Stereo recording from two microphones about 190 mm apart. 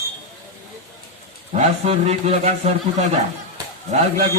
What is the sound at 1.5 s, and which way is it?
A man's voice, 35° right (ahead or behind).